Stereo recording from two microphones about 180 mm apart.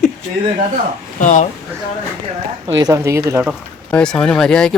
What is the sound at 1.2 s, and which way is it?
Speech, 40° left (ahead or behind).